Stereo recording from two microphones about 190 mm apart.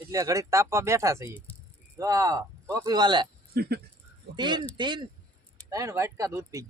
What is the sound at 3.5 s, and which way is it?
Speech, 55° right (ahead or behind).